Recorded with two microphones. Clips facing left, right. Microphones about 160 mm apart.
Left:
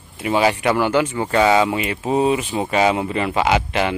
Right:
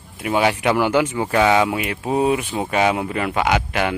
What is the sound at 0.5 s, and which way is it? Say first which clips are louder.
Speech: even; 15° right (ahead or behind).